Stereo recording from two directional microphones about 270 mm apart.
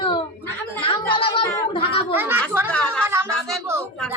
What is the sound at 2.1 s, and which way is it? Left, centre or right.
Speech, centre.